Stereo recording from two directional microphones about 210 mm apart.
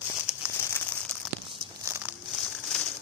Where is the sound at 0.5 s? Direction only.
10° left (ahead or behind).